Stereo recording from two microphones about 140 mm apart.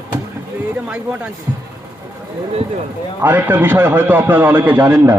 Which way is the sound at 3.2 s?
15° right (ahead or behind).